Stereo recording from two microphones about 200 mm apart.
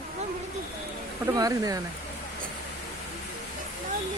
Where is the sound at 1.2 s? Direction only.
15° right (ahead or behind).